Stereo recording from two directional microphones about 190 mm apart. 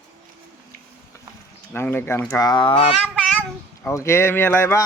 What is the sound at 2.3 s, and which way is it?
Speech, 20° left (ahead or behind).